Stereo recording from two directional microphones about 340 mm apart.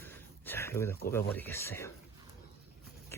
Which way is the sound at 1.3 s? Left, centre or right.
Centre.